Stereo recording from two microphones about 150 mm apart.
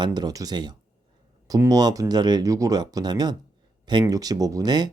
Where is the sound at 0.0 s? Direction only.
30° right (ahead or behind).